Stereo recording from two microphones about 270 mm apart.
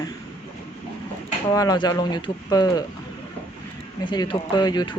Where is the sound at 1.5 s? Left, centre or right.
Centre.